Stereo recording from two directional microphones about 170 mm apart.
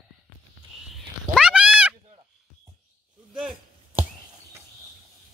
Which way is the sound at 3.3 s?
5° right (ahead or behind).